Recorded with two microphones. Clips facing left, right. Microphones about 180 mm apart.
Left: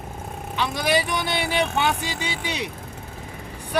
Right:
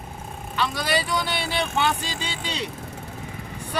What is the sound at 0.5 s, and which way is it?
Speech, 15° left (ahead or behind).